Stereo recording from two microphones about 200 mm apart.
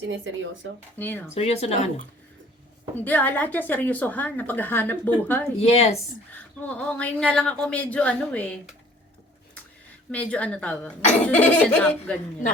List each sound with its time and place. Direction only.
0.0 s speech: 65° right (ahead or behind)
0.9 s speech: 10° left (ahead or behind)
1.3 s speech: 30° left (ahead or behind)
2.9 s speech: 10° left (ahead or behind)
5.5 s speech: 30° left (ahead or behind)
6.3 s speech: 10° left (ahead or behind)
10.1 s speech: 5° left (ahead or behind)